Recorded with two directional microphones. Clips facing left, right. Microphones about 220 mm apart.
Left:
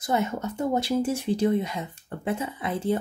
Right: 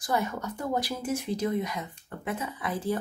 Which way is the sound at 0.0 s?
25° left (ahead or behind).